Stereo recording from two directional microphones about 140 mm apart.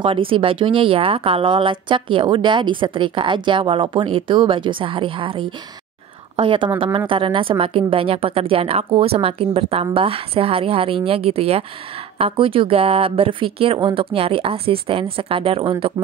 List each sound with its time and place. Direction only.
0.0 s a woman's voice: 40° right (ahead or behind)